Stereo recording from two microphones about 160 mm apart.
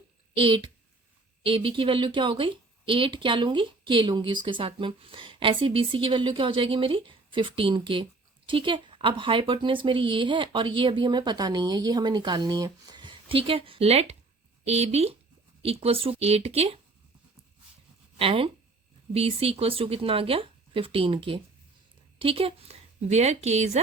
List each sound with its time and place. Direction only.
0.3 s speech: 30° right (ahead or behind)
18.2 s a woman's voice: 35° right (ahead or behind)